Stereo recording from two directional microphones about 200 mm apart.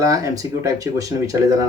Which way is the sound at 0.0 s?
15° right (ahead or behind).